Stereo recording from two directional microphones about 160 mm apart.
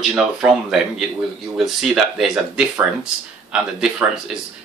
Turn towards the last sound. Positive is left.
turn(degrees=-5)  # may be behind; listen again after turning